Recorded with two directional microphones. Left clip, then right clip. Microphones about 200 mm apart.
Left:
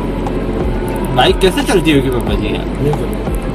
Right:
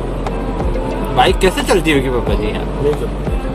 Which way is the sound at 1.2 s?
35° right (ahead or behind).